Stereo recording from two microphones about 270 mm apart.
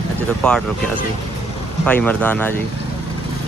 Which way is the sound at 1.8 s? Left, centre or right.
Centre.